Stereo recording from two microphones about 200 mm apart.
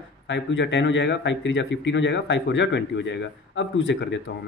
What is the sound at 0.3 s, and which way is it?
Speech, 65° left (ahead or behind).